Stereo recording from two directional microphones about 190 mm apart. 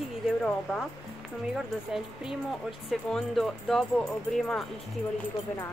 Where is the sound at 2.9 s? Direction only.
Centre (ahead or behind).